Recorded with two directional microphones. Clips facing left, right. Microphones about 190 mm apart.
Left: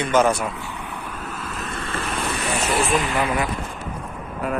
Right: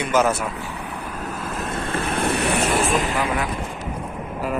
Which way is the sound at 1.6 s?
55° right (ahead or behind).